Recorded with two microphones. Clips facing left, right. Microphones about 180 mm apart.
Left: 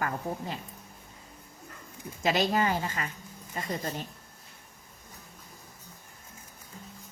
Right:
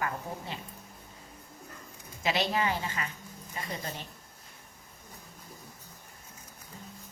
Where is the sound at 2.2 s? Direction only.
45° left (ahead or behind).